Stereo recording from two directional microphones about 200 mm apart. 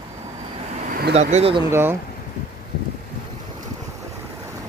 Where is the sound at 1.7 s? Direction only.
10° right (ahead or behind).